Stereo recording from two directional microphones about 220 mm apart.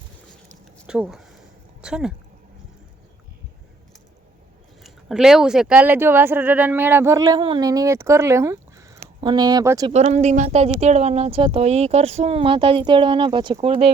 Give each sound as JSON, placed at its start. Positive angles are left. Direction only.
{"t": 0.9, "sound": "speech", "side_deg": -5}
{"t": 4.8, "sound": "speech", "side_deg": 0}
{"t": 9.9, "sound": "speech", "side_deg": -30}